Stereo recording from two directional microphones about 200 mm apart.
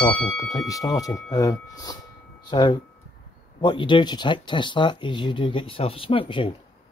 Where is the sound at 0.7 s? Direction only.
15° left (ahead or behind).